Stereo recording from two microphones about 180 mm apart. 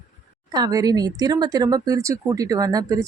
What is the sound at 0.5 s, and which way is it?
Speech, 20° right (ahead or behind).